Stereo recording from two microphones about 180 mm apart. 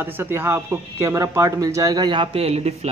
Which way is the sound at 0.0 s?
10° right (ahead or behind).